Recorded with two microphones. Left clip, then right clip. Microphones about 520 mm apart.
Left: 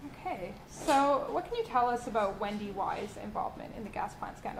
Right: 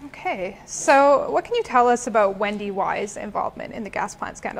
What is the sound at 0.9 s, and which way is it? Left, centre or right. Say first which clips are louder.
A woman's voice: right 12 dB; right.